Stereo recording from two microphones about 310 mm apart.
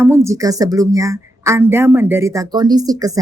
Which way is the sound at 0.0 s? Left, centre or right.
Centre.